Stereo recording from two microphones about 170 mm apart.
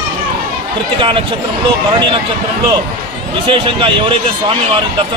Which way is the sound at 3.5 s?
30° right (ahead or behind).